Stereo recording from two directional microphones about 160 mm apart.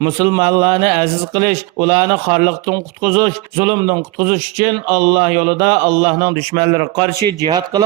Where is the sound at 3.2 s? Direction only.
35° right (ahead or behind).